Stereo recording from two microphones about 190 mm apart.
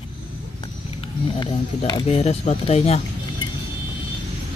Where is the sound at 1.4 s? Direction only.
25° left (ahead or behind).